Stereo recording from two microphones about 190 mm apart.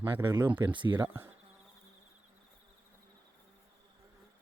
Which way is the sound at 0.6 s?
25° right (ahead or behind).